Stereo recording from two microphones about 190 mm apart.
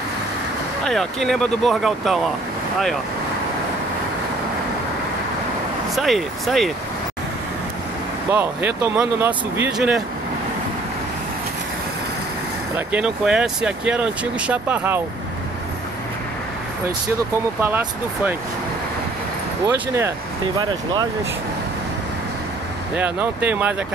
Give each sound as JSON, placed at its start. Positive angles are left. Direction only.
{"t": 0.8, "sound": "speech", "side_deg": 0}
{"t": 5.9, "sound": "speech", "side_deg": 0}
{"t": 8.3, "sound": "speech", "side_deg": -10}
{"t": 12.7, "sound": "speech", "side_deg": -5}
{"t": 17.6, "sound": "speech", "side_deg": -10}
{"t": 19.6, "sound": "speech", "side_deg": -15}
{"t": 22.9, "sound": "speech", "side_deg": -10}